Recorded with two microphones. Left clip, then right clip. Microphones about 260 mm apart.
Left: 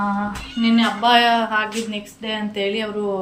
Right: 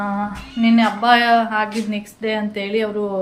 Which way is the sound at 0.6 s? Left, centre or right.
Centre.